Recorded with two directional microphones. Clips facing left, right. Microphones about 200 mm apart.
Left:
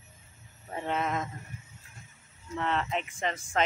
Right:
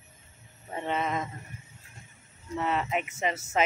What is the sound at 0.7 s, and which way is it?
Speech, centre (ahead or behind).